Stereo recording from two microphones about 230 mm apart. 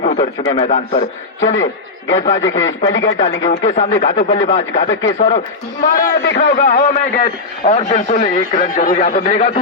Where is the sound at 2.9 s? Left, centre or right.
Left.